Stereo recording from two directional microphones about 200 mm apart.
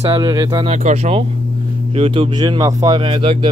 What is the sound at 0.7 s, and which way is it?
Speech, 30° right (ahead or behind).